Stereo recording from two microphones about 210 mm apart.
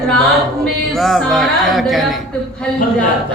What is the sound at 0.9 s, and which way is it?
Speech, centre (ahead or behind).